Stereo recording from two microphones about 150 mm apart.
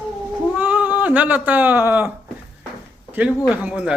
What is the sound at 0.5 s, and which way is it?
Speech, 10° right (ahead or behind).